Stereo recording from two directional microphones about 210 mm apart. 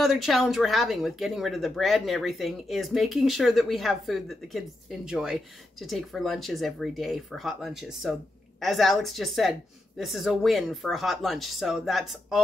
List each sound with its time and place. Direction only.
0.0 s speech: centre (ahead or behind)